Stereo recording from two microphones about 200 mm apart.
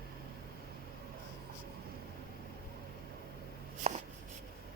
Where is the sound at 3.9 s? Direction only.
35° right (ahead or behind).